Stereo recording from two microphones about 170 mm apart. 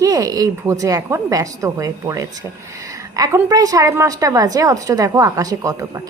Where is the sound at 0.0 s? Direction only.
20° right (ahead or behind).